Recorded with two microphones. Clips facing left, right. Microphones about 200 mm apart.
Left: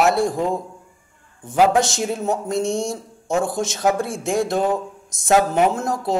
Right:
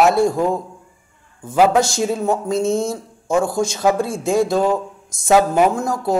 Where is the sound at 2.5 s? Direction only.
Centre (ahead or behind).